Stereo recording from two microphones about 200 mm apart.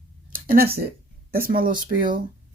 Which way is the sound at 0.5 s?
50° right (ahead or behind).